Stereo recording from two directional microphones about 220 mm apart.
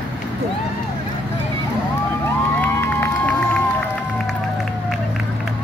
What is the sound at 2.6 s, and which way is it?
Crowd, 10° left (ahead or behind).